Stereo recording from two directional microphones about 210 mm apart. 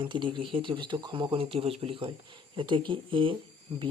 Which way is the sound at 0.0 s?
25° right (ahead or behind).